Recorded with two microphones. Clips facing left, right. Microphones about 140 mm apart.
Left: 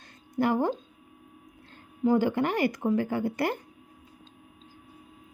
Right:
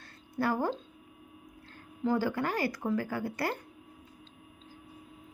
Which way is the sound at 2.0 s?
20° left (ahead or behind).